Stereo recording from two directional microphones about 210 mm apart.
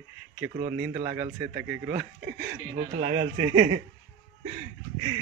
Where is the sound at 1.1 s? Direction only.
10° right (ahead or behind).